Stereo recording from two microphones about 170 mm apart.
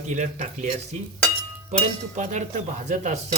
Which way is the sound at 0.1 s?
45° right (ahead or behind).